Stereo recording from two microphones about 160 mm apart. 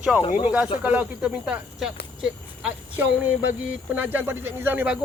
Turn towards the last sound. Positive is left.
turn(degrees=-10)  # may be behind; listen again after turning